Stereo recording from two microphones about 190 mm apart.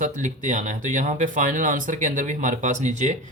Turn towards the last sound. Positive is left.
turn(degrees=-40)  # may be behind; listen again after turning